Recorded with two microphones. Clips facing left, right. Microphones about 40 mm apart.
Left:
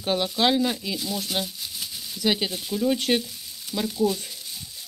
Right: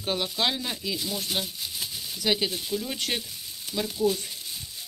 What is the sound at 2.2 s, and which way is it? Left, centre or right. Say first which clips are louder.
Speech: left 2 dB; centre.